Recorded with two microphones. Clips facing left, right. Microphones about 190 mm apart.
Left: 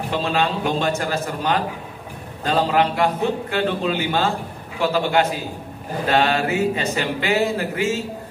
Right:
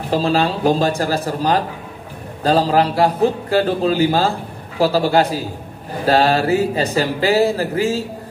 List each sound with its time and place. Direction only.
0.1 s speech: 35° right (ahead or behind)